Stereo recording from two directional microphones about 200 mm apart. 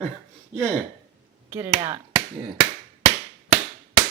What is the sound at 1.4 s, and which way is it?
Speech, 10° right (ahead or behind).